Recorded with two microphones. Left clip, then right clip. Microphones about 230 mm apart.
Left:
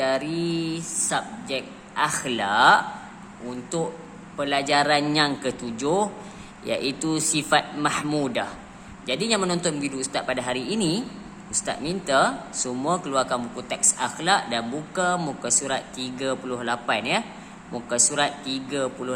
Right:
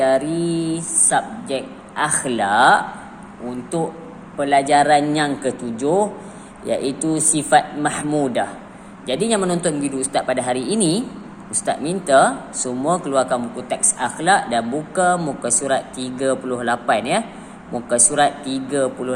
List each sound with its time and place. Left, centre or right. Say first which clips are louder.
0.0 s mantra: right 7 dB; centre
4.4 s speech: right 7 dB; centre